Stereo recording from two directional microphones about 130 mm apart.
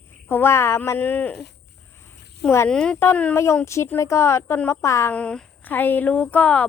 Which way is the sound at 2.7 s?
5° left (ahead or behind).